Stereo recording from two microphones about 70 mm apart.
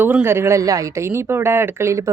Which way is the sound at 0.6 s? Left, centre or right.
Right.